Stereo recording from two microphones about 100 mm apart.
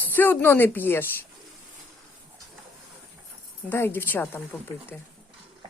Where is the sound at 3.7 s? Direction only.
20° left (ahead or behind).